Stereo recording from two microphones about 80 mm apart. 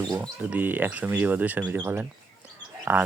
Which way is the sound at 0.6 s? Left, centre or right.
Right.